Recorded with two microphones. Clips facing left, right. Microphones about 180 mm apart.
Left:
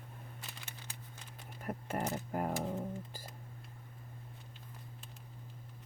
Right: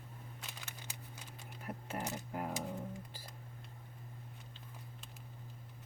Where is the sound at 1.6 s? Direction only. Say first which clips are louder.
Left 5 dB; 45° left (ahead or behind).